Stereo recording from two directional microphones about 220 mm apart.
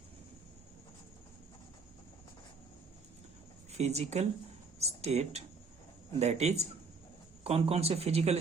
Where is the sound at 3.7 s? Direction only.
30° right (ahead or behind).